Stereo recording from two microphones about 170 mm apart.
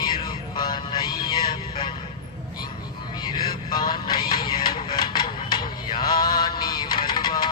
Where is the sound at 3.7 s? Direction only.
25° left (ahead or behind).